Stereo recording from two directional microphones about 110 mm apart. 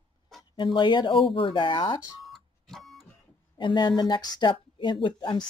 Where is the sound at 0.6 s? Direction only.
45° left (ahead or behind).